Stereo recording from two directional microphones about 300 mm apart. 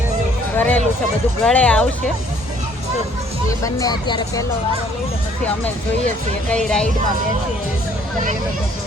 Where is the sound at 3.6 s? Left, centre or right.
Centre.